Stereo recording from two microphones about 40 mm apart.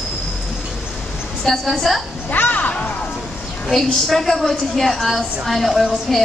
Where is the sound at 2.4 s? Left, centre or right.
Left.